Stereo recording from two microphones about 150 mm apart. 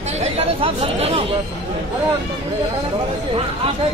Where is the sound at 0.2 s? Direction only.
40° right (ahead or behind).